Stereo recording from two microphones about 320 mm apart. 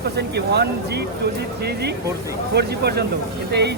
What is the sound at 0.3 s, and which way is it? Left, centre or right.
Speech, right.